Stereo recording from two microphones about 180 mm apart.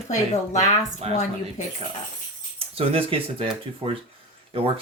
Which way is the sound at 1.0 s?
35° right (ahead or behind).